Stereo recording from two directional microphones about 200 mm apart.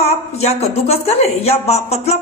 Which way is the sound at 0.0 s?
30° left (ahead or behind).